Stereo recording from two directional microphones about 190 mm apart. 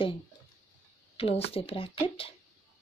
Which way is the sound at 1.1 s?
30° left (ahead or behind).